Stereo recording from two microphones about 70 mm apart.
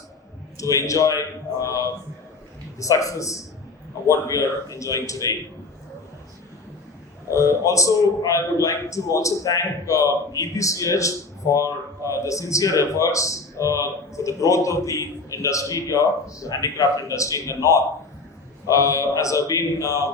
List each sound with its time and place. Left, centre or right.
0.5 s a man's voice: left
7.3 s a man's voice: left